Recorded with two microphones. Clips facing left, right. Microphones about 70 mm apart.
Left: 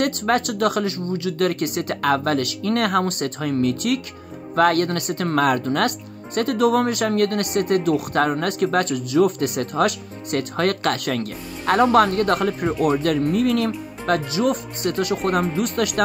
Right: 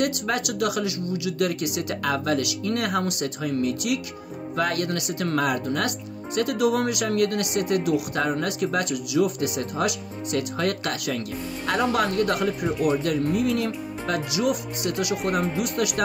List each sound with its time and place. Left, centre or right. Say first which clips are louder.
0.0 s speech: left 5 dB; left
14.3 s speech: left 3 dB; left